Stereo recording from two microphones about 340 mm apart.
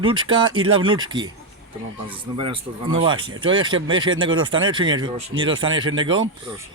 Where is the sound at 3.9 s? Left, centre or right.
Right.